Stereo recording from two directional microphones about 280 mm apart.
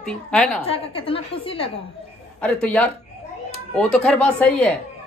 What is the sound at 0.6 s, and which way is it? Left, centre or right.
A child's voice, centre.